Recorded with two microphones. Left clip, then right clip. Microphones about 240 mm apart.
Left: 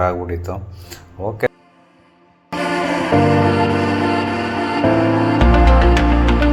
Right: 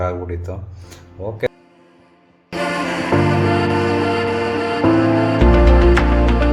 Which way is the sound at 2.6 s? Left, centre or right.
Centre.